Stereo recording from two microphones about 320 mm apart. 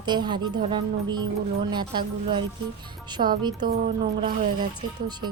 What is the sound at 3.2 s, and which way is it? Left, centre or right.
Speech, right.